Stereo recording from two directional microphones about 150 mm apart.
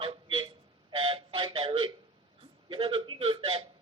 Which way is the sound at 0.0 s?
35° right (ahead or behind).